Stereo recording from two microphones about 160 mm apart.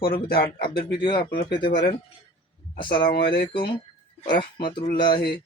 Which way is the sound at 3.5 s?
30° left (ahead or behind).